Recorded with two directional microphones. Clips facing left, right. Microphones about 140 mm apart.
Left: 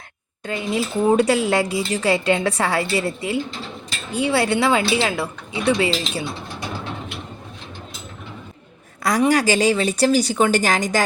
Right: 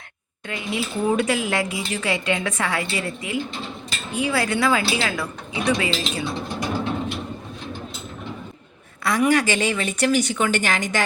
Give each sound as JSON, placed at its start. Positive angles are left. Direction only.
{"t": 0.4, "sound": "a woman's voice", "side_deg": 35}
{"t": 9.0, "sound": "speech", "side_deg": 35}